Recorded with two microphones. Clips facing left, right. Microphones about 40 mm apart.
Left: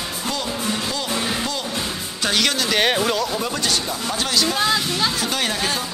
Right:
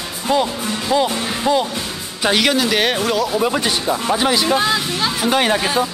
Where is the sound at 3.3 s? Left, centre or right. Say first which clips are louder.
Right 5 dB; right.